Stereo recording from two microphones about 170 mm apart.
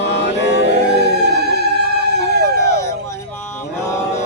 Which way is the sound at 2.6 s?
20° left (ahead or behind).